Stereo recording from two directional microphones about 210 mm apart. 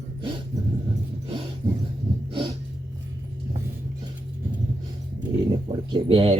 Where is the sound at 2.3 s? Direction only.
20° right (ahead or behind).